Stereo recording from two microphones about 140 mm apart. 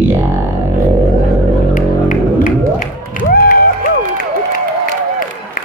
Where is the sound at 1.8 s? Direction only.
70° left (ahead or behind).